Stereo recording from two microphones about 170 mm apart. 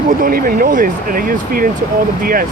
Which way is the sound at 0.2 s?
55° right (ahead or behind).